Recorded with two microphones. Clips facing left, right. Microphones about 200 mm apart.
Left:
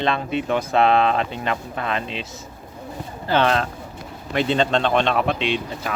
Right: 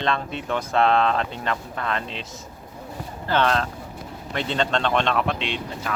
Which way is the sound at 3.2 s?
15° left (ahead or behind).